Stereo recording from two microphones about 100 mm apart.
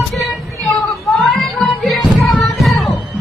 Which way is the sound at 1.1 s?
Centre (ahead or behind).